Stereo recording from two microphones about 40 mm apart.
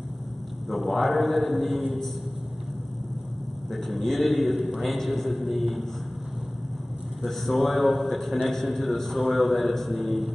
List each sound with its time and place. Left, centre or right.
0.7 s a man's voice: centre
3.7 s a man's voice: centre
7.2 s a man's voice: centre